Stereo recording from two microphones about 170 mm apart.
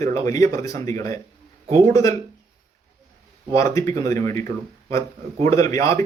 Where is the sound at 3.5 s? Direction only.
15° left (ahead or behind).